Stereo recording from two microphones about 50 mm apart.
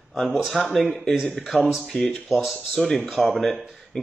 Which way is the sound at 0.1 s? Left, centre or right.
Centre.